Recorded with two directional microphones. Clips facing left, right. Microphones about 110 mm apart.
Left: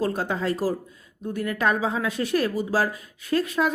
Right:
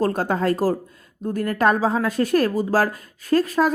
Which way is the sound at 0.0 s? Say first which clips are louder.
Right 5 dB; 45° right (ahead or behind).